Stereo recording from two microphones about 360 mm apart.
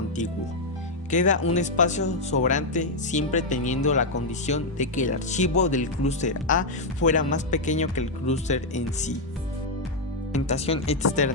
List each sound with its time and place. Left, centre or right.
1.1 s speech: left
10.3 s speech: centre